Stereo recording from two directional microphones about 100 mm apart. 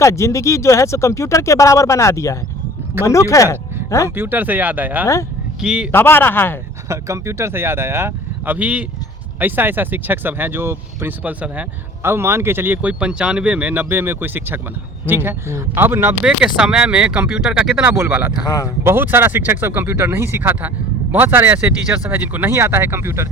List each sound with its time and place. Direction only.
0.0 s speech: 30° left (ahead or behind)
4.1 s speech: 20° right (ahead or behind)
5.9 s a man's voice: 20° left (ahead or behind)
6.8 s speech: 30° right (ahead or behind)
12.0 s speech: 25° right (ahead or behind)
16.2 s speech: 10° right (ahead or behind)
17.9 s speech: 20° right (ahead or behind)
18.4 s speech: 35° left (ahead or behind)
18.8 s speech: 20° right (ahead or behind)